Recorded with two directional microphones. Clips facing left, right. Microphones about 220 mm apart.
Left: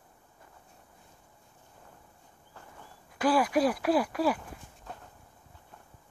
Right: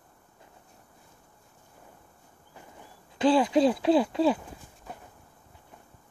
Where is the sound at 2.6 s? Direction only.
20° right (ahead or behind).